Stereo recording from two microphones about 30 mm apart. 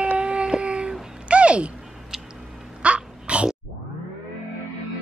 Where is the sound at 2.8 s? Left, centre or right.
Right.